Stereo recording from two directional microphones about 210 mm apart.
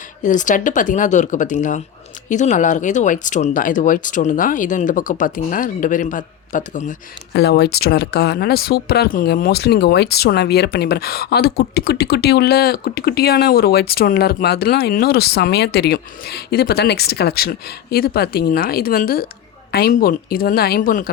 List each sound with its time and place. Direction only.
0.2 s speech: 35° left (ahead or behind)
7.3 s speech: 50° left (ahead or behind)